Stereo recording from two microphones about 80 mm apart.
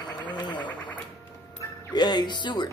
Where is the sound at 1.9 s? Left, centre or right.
Left.